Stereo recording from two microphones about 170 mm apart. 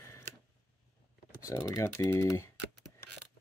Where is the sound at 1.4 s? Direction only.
20° left (ahead or behind).